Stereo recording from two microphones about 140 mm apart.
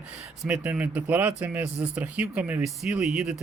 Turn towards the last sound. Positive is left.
turn(degrees=-5)  # may be behind; listen again after turning